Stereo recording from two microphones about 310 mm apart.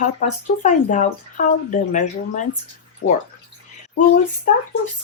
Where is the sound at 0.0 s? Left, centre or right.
Left.